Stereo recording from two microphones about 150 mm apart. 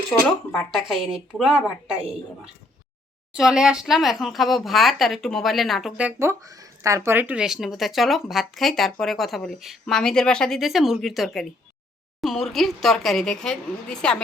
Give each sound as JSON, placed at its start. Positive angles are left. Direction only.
{"t": 0.1, "sound": "speech", "side_deg": 15}
{"t": 0.7, "sound": "speech", "side_deg": 0}
{"t": 3.3, "sound": "speech", "side_deg": -5}